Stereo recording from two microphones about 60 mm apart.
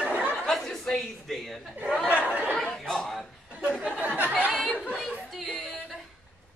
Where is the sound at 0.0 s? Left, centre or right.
Right.